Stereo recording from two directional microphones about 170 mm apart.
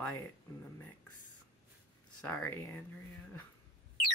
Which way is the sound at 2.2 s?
15° left (ahead or behind).